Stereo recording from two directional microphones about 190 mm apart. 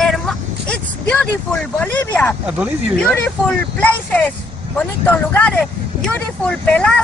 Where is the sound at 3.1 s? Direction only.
10° left (ahead or behind).